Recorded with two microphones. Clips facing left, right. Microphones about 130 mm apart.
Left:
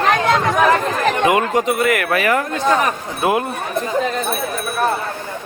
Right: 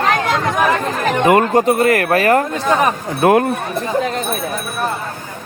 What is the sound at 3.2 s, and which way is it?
Speech, 55° right (ahead or behind).